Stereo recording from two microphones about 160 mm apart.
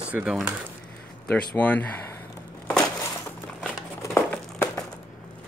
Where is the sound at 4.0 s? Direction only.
15° left (ahead or behind).